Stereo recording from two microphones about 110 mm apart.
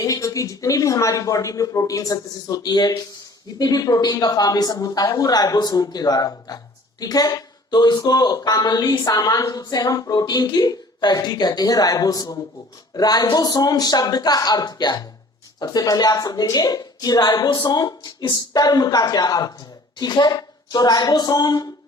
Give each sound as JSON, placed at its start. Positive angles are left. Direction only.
{"t": 0.0, "sound": "speech", "side_deg": 30}